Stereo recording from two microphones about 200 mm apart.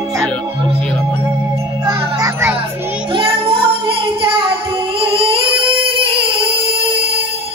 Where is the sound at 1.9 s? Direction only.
15° right (ahead or behind).